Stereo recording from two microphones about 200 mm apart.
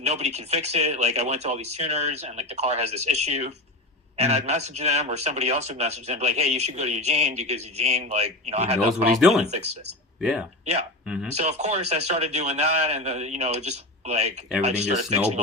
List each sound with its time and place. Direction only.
0.0 s speech: 35° right (ahead or behind)
9.2 s speech: centre (ahead or behind)
11.0 s a sound: 5° right (ahead or behind)
11.3 s speech: 35° right (ahead or behind)